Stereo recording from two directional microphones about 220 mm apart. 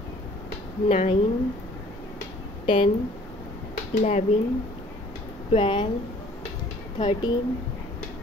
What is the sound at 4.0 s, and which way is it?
Speech, 30° left (ahead or behind).